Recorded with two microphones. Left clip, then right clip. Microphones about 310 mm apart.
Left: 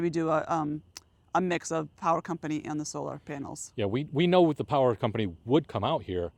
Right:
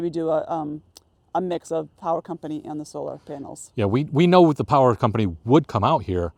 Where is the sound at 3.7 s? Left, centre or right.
Right.